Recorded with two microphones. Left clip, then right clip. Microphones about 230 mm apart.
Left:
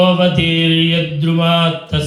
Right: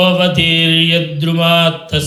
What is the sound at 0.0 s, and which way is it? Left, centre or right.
Mantra, right.